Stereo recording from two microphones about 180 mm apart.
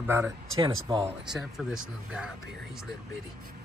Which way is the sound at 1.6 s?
5° right (ahead or behind).